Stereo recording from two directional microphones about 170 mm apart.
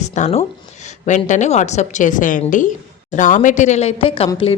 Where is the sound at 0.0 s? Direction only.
40° left (ahead or behind).